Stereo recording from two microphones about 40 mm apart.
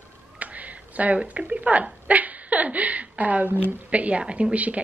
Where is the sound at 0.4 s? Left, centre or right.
Right.